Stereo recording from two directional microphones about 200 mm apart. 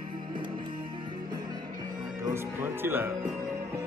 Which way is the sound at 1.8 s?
20° right (ahead or behind).